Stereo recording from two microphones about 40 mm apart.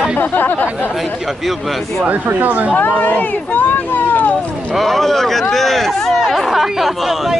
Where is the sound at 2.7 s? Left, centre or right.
Left.